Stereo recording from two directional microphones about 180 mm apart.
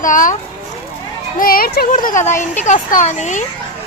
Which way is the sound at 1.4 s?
55° left (ahead or behind).